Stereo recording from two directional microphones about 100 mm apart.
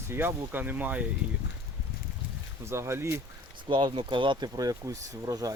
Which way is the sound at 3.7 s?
55° right (ahead or behind).